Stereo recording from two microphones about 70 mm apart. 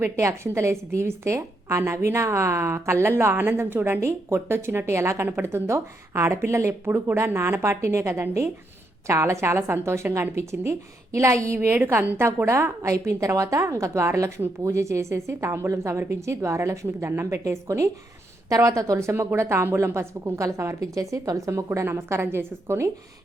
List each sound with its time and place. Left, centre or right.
0.0 s a woman's voice: right
21.8 s a woman's voice: right